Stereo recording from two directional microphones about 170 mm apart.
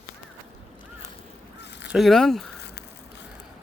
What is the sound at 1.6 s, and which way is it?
Honk, 90° left.